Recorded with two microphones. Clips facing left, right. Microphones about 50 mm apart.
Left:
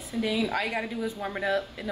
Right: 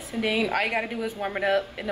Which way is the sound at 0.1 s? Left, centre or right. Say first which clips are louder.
Right 2 dB; right.